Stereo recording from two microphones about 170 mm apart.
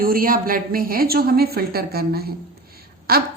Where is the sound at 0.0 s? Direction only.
60° right (ahead or behind).